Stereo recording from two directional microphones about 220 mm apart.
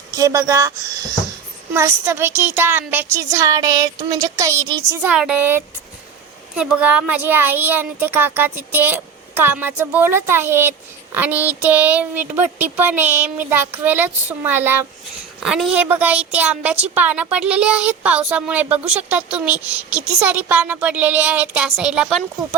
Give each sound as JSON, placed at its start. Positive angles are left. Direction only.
{"t": 0.1, "sound": "speech", "side_deg": -15}
{"t": 1.7, "sound": "speech", "side_deg": -10}